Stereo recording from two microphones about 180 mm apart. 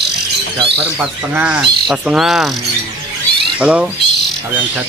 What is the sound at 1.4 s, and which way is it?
Bird, 5° right (ahead or behind).